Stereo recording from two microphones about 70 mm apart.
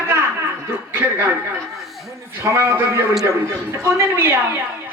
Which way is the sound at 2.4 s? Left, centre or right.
Right.